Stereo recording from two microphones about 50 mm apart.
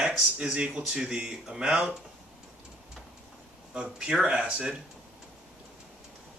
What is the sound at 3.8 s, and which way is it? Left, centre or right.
Speech, centre.